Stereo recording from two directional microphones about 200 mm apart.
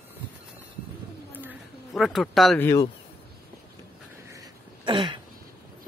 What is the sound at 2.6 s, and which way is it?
Speech, 15° left (ahead or behind).